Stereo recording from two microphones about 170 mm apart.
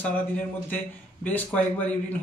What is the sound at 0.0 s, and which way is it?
A man's voice, 10° left (ahead or behind).